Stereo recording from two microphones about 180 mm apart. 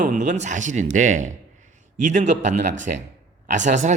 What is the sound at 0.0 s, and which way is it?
A man's voice, 45° right (ahead or behind).